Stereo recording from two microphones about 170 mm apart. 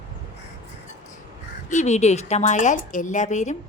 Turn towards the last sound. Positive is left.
turn(degrees=45)  # may be behind; listen again after turning